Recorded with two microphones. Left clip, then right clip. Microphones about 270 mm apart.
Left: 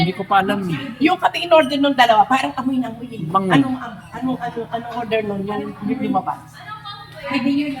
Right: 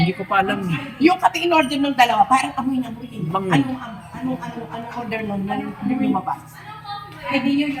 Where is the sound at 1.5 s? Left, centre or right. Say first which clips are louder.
Left 4 dB; centre.